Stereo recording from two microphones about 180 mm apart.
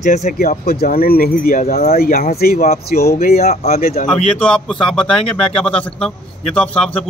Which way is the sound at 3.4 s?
40° left (ahead or behind).